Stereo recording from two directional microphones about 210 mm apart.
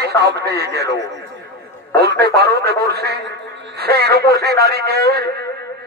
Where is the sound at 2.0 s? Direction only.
50° right (ahead or behind).